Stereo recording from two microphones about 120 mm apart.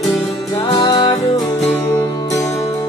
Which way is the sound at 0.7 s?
35° left (ahead or behind).